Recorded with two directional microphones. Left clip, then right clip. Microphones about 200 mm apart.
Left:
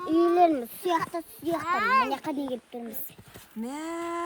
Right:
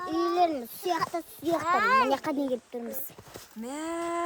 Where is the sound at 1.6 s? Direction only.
50° right (ahead or behind).